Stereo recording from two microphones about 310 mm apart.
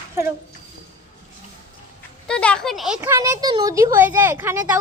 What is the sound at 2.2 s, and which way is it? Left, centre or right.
Speech, centre.